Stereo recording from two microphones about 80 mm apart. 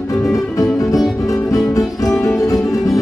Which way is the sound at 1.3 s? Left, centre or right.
Left.